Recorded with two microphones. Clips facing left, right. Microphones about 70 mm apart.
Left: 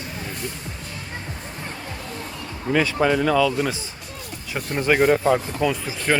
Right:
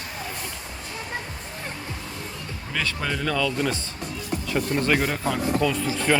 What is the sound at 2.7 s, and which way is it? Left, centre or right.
Speech, centre.